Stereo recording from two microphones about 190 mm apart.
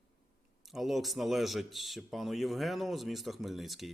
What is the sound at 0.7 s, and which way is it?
Speech, centre (ahead or behind).